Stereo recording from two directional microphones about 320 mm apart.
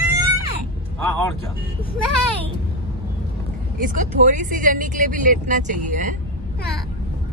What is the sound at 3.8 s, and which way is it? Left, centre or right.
Speech, right.